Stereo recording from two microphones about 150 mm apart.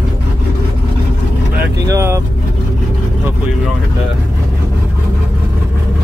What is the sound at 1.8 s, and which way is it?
Vehicle, 20° right (ahead or behind).